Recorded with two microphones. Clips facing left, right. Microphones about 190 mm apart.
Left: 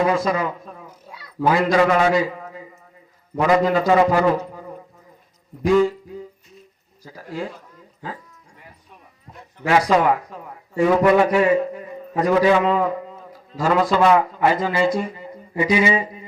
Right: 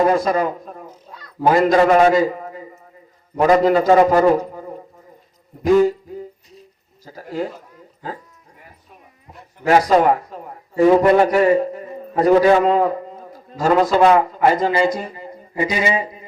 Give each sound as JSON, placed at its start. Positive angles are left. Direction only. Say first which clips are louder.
{"t": 0.0, "sound": "a man's voice", "louder": "right 3 dB", "side_deg": -45}
{"t": 1.0, "sound": "a sound", "louder": "right 1 dB", "side_deg": 10}
{"t": 1.5, "sound": "a man's voice", "louder": "right 3 dB", "side_deg": -45}
{"t": 7.0, "sound": "a man's voice", "louder": "right 4 dB", "side_deg": -40}
{"t": 9.6, "sound": "a man's voice", "louder": "right 3 dB", "side_deg": -40}